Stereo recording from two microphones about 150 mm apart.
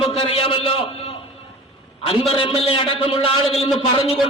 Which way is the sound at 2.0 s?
40° left (ahead or behind).